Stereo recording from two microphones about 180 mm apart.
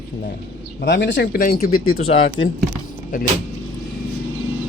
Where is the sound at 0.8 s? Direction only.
80° left.